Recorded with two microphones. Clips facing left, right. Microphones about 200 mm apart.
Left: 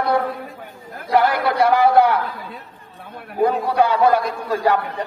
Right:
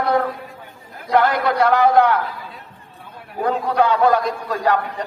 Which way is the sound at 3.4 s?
10° left (ahead or behind).